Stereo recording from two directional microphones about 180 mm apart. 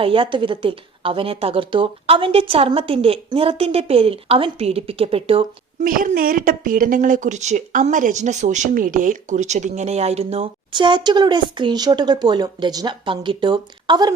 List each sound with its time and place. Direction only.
0.0 s speech: 30° right (ahead or behind)
5.8 s speech: 50° right (ahead or behind); by 14.1 s 25° right (ahead or behind)